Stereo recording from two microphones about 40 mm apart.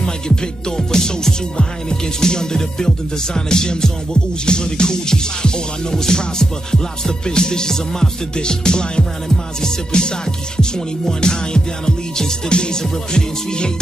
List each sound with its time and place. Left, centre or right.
0.0 s music: centre